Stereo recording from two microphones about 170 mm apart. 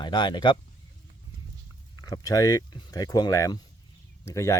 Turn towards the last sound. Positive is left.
turn(degrees=15)  # may be behind; listen again after turning